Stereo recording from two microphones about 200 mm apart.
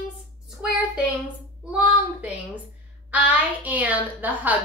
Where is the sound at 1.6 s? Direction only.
5° right (ahead or behind).